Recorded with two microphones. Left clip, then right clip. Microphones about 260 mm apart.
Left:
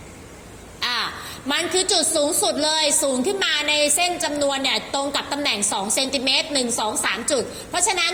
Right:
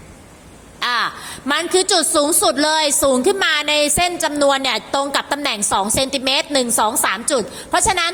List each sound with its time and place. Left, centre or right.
0.8 s a woman's voice: right